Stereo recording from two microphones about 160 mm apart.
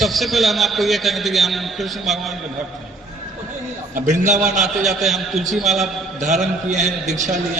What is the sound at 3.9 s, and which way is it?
Speech, 50° right (ahead or behind).